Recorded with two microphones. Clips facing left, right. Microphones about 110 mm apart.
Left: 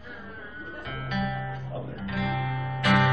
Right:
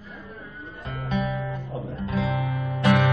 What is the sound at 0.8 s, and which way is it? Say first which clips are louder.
Music: right 3 dB; 30° right (ahead or behind).